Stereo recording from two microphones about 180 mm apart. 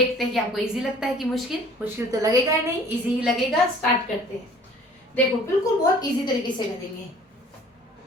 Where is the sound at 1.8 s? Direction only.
15° right (ahead or behind).